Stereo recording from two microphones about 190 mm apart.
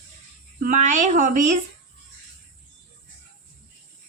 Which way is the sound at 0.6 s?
40° right (ahead or behind).